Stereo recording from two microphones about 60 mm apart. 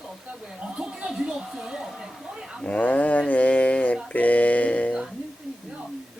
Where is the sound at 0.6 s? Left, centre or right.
Centre.